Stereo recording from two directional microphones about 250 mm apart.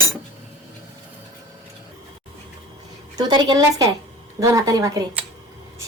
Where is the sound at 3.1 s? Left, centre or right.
Centre.